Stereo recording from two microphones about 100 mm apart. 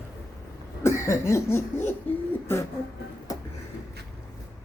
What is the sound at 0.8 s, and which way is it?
Cough, 30° left (ahead or behind).